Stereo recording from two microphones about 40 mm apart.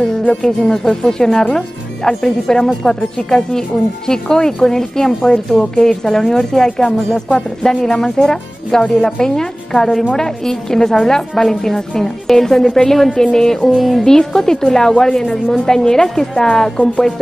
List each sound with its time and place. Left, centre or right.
0.4 s a woman's voice: centre
13.7 s speech: centre
14.0 s a woman's voice: centre